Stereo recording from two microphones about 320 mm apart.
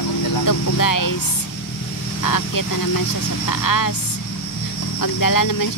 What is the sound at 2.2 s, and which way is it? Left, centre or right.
Speech, left.